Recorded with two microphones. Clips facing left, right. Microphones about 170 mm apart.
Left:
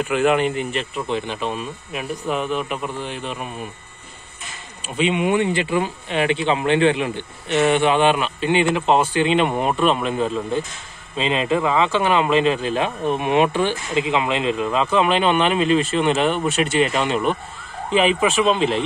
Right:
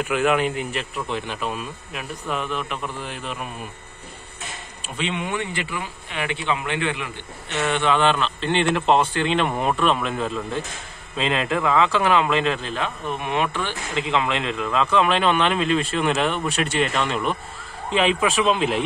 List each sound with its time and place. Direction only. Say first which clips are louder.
0.0 s speech: left 3 dB; centre (ahead or behind)
4.9 s speech: left 8 dB; 10° left (ahead or behind); by 7.1 s 30° left (ahead or behind)
7.6 s a man's voice: left 3 dB; 15° left (ahead or behind)
12.7 s speech: left 6 dB; 20° left (ahead or behind)
14.0 s speech: left 1 dB; 5° left (ahead or behind)